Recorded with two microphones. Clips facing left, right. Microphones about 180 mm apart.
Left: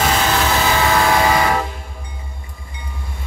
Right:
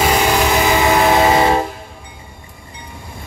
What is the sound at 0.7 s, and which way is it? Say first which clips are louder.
Train: right 3 dB; 20° right (ahead or behind).